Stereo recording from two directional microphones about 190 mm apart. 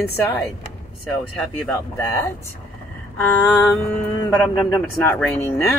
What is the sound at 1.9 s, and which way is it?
Speech, 10° left (ahead or behind).